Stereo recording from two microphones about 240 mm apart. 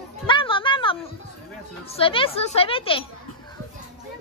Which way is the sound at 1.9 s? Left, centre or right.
Left.